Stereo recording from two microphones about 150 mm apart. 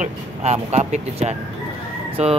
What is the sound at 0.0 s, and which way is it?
Speech, 50° right (ahead or behind).